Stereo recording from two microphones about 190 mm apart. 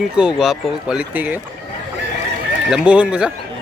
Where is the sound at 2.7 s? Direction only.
5° right (ahead or behind).